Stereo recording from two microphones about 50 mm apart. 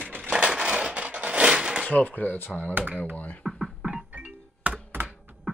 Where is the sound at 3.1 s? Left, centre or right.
Left.